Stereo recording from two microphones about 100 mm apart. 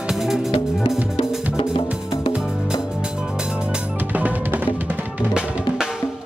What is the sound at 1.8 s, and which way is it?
Music, 5° right (ahead or behind).